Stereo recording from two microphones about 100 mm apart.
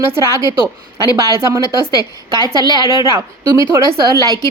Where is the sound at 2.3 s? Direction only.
45° right (ahead or behind).